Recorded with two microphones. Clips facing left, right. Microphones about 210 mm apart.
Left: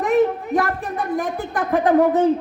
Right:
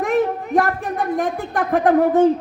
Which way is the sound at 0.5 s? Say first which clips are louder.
Right 2 dB; 50° right (ahead or behind).